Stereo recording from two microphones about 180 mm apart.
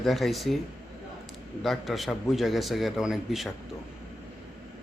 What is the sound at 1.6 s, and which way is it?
A man's voice, centre (ahead or behind).